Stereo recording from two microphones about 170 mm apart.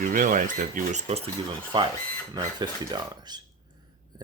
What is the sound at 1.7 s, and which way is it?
Speech, 25° right (ahead or behind).